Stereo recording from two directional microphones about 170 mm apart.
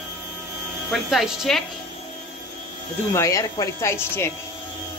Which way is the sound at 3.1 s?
15° left (ahead or behind).